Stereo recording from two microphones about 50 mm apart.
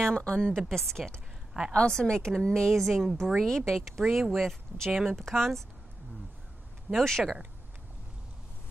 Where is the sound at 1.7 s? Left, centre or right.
Centre.